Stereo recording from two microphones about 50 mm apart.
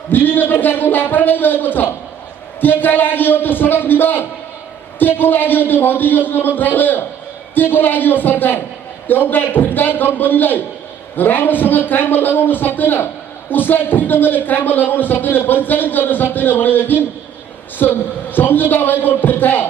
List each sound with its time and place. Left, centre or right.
0.1 s a man's voice: left